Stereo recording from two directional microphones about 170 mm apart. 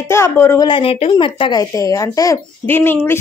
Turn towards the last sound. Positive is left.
turn(degrees=15)  # may be behind; listen again after turning